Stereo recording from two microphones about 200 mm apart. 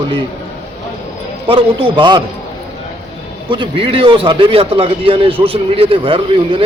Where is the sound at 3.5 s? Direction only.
25° right (ahead or behind).